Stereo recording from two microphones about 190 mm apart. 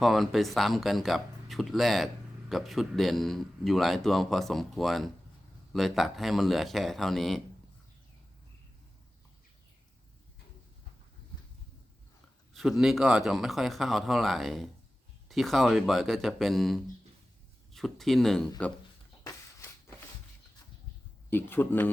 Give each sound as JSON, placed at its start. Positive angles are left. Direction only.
{"t": 0.0, "sound": "a man's voice", "side_deg": 0}
{"t": 12.5, "sound": "a man's voice", "side_deg": 0}
{"t": 19.2, "sound": "a sound", "side_deg": 15}
{"t": 21.2, "sound": "speech", "side_deg": 10}